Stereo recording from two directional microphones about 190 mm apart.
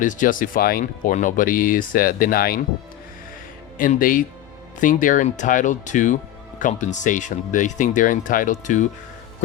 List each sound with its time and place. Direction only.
0.0 s speech: 45° left (ahead or behind)
3.8 s speech: 45° left (ahead or behind)